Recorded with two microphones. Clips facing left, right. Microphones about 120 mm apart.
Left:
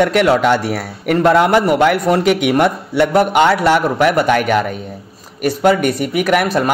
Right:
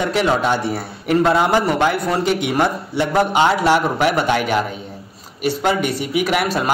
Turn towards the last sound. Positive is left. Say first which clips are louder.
# left 4 dB
turn(degrees=50)  # may be behind; listen again after turning